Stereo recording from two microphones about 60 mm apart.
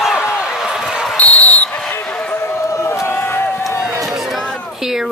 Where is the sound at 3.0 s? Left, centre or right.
Left.